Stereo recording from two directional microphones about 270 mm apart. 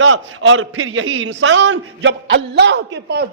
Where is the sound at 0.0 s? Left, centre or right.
Right.